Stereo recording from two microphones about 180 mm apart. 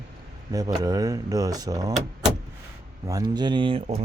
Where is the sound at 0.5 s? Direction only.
20° right (ahead or behind).